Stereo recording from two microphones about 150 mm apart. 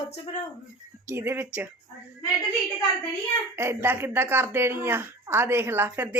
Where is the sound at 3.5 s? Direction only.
15° right (ahead or behind).